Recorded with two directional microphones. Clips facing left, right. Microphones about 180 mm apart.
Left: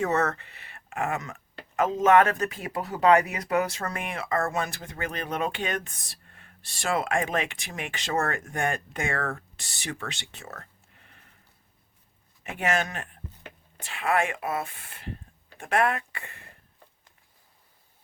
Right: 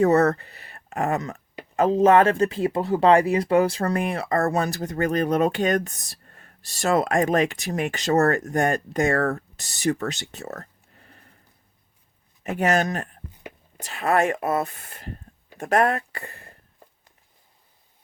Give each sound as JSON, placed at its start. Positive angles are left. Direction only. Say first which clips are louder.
{"t": 0.0, "sound": "speech", "louder": "right 8 dB", "side_deg": -35}
{"t": 12.4, "sound": "speech", "louder": "right 6 dB", "side_deg": -40}